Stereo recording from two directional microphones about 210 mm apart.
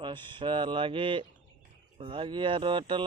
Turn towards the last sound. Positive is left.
turn(degrees=-25)  # may be behind; listen again after turning